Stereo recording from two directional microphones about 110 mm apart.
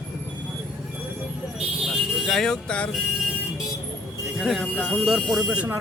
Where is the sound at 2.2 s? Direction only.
Centre (ahead or behind).